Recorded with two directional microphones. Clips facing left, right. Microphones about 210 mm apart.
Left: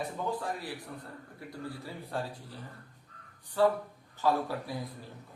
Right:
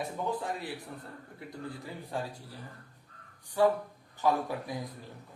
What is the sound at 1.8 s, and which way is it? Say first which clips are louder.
Speech: even; 15° right (ahead or behind).